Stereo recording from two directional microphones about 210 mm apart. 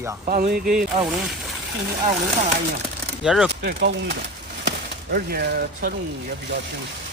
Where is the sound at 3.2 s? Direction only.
Centre (ahead or behind).